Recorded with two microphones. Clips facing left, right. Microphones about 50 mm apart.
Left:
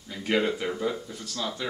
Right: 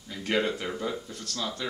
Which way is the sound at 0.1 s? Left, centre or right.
Centre.